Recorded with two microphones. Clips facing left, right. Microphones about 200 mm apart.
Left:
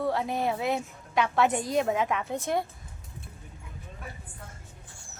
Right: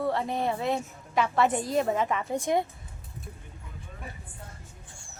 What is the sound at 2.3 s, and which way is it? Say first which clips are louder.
Speech: right 3 dB; 15° right (ahead or behind).